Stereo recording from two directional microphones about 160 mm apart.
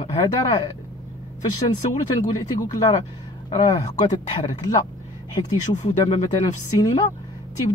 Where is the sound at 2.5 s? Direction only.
25° left (ahead or behind).